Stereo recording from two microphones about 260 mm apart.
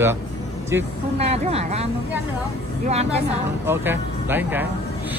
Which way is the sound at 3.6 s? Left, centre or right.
Centre.